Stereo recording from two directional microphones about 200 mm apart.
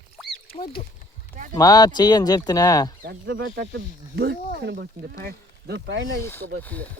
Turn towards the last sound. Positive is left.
turn(degrees=5)  # may be behind; listen again after turning